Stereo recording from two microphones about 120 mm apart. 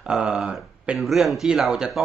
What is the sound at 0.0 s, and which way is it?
Speech, 5° right (ahead or behind).